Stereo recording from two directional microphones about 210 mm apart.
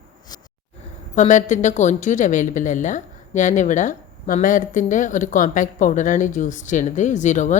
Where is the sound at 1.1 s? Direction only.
35° left (ahead or behind).